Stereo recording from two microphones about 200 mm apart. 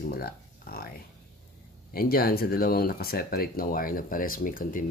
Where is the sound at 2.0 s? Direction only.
50° left (ahead or behind).